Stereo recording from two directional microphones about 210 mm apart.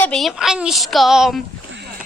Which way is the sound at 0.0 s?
Centre (ahead or behind).